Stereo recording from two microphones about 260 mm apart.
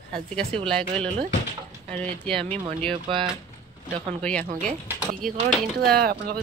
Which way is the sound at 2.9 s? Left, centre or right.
Centre.